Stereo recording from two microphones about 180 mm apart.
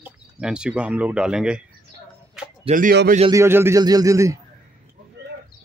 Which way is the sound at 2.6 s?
50° right (ahead or behind).